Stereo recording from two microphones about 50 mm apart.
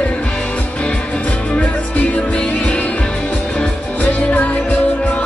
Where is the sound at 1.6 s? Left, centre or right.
Left.